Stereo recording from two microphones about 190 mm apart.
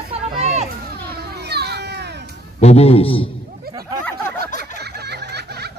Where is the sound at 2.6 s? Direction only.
30° left (ahead or behind).